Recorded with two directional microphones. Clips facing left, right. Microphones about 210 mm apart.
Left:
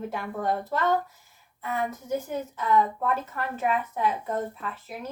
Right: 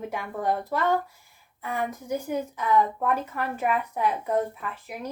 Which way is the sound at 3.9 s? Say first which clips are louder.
Right 2 dB; 15° right (ahead or behind).